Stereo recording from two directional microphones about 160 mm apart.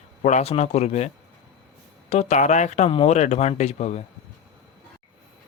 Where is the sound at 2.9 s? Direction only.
35° left (ahead or behind).